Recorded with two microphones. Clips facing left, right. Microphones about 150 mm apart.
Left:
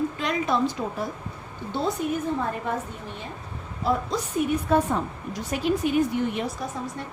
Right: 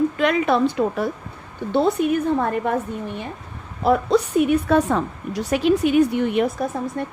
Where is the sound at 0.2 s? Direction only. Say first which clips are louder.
Right 6 dB; 65° right (ahead or behind).